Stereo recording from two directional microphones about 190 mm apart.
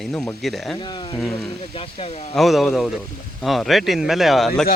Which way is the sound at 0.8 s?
25° left (ahead or behind).